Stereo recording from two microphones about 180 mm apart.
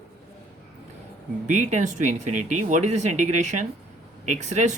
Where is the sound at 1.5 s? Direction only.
40° right (ahead or behind).